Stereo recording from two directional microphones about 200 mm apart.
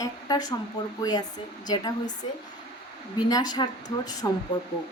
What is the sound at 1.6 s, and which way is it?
Speech, 20° left (ahead or behind).